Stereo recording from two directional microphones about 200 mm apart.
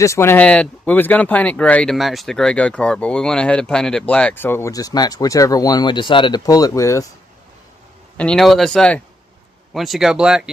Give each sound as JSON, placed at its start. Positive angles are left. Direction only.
{"t": 0.0, "sound": "speech", "side_deg": 15}
{"t": 8.2, "sound": "speech", "side_deg": 5}